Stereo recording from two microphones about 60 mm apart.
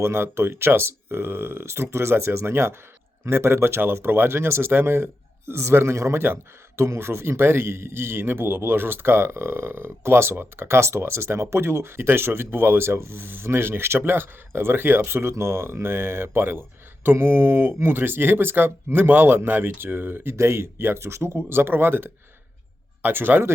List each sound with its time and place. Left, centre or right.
0.0 s a man's voice: right
20.3 s a man's voice: right